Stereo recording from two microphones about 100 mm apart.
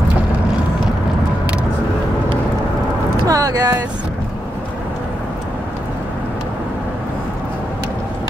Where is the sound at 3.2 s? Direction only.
35° right (ahead or behind).